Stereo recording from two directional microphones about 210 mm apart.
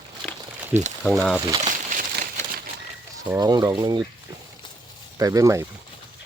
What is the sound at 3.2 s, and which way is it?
Speech, 20° right (ahead or behind).